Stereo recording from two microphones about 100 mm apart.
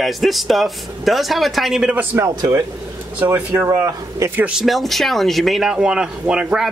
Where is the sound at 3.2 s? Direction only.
20° right (ahead or behind).